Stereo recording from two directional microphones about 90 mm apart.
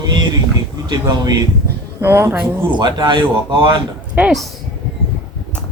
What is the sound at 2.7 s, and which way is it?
Speech, 55° right (ahead or behind).